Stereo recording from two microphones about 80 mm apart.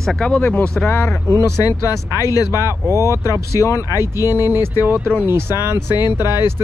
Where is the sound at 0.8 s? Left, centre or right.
Left.